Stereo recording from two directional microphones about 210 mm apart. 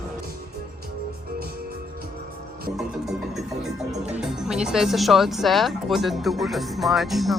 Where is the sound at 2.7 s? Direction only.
Centre (ahead or behind).